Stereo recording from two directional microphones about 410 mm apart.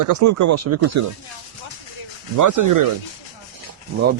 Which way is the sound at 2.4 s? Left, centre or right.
Right.